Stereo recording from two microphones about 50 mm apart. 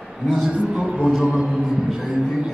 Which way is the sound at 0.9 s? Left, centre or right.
Centre.